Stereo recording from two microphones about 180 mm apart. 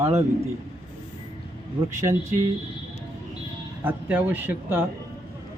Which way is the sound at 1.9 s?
15° right (ahead or behind).